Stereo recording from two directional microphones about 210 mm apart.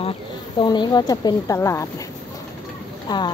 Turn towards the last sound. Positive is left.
turn(degrees=20)  # may be behind; listen again after turning